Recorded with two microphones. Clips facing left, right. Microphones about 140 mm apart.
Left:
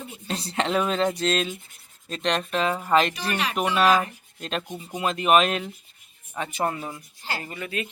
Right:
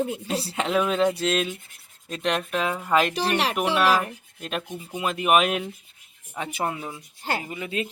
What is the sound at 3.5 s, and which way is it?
Speech, 5° right (ahead or behind).